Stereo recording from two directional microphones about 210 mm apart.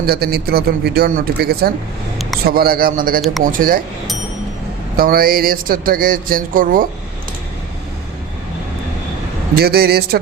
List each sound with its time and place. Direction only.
0.0 s speech: 45° right (ahead or behind)
4.9 s speech: 45° right (ahead or behind)
9.6 s speech: 50° right (ahead or behind)